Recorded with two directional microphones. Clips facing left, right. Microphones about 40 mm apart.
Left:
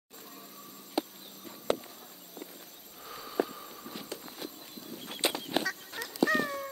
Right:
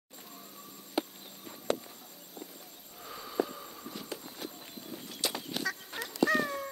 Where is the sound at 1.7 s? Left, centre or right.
Centre.